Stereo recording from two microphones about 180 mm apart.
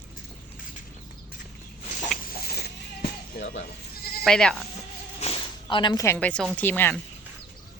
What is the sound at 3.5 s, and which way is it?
Goat, 65° left (ahead or behind).